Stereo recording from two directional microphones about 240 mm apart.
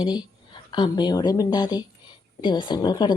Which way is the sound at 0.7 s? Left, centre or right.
Centre.